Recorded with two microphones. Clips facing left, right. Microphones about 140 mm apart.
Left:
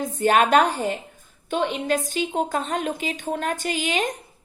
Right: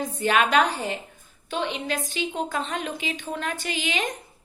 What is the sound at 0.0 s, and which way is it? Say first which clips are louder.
A woman's voice: left 3 dB; 45° left (ahead or behind).